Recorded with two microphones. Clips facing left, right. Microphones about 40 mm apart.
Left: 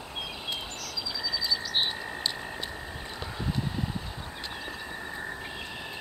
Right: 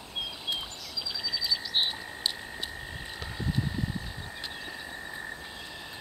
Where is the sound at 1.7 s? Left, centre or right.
Centre.